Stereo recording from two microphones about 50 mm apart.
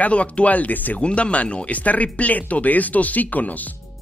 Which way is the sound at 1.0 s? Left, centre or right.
Left.